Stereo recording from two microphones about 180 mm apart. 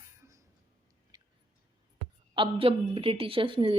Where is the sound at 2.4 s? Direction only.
30° right (ahead or behind).